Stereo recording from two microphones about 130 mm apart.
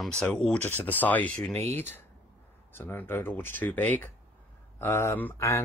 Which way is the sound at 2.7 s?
15° left (ahead or behind).